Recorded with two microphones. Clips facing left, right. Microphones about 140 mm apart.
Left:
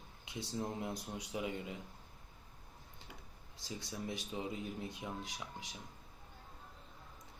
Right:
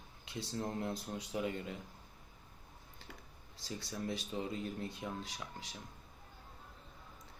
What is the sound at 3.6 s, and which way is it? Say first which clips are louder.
Speech: right 2 dB; 15° left (ahead or behind).